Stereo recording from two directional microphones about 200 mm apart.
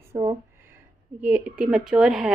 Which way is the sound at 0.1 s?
30° right (ahead or behind).